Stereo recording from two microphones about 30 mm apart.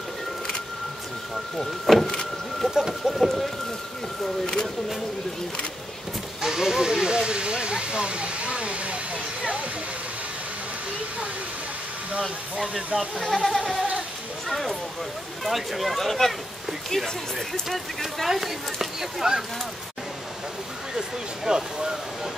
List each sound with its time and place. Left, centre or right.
1.3 s speech: centre
2.6 s speech: right
3.2 s speech: centre
6.4 s speech: centre; by 9.2 s right
12.5 s speech: centre
13.2 s speech: centre
17.6 s speech: centre
21.5 s speech: right